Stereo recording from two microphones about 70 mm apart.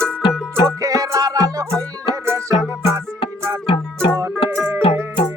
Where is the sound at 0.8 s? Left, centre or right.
Right.